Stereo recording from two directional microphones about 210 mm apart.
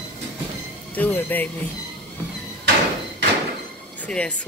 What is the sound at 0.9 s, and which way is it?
Music, 10° left (ahead or behind).